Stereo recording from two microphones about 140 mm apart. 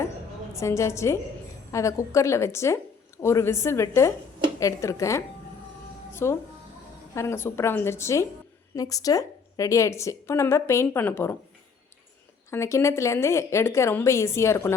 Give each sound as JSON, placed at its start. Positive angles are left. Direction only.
{"t": 0.5, "sound": "a woman's voice", "side_deg": 20}
{"t": 6.2, "sound": "a woman's voice", "side_deg": 20}
{"t": 12.5, "sound": "a woman's voice", "side_deg": 20}